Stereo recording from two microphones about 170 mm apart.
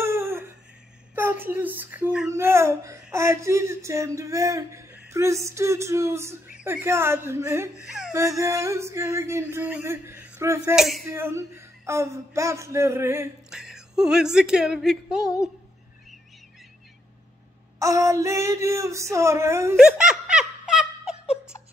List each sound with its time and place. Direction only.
0.0 s a sound: 15° right (ahead or behind)
1.1 s speech: 10° right (ahead or behind)
7.8 s a sound: 5° right (ahead or behind)
8.1 s speech: 15° right (ahead or behind)
10.8 s a sound: centre (ahead or behind)
11.1 s speech: 15° right (ahead or behind)
13.5 s speech: 5° right (ahead or behind)
17.7 s speech: 15° right (ahead or behind)
19.8 s snicker: 5° right (ahead or behind)